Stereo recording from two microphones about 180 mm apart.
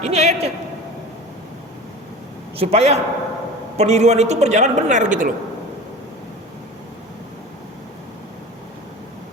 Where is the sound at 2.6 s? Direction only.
35° right (ahead or behind).